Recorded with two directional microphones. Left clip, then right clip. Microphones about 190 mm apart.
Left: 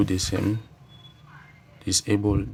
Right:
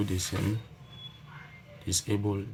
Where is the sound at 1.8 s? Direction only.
50° left (ahead or behind).